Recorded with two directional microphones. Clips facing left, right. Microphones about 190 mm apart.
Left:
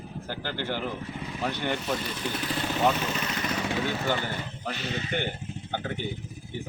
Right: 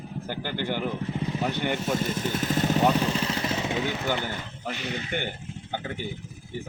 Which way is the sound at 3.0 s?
30° right (ahead or behind).